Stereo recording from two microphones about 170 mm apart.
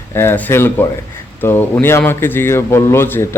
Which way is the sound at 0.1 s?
15° left (ahead or behind).